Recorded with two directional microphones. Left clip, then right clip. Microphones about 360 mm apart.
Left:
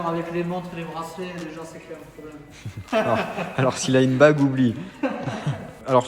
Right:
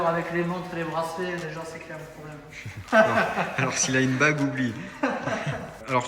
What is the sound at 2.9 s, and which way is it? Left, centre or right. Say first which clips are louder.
A man's voice: right 2 dB; centre.